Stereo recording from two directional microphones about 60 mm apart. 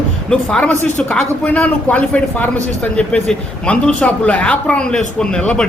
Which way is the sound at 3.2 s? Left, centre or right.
Centre.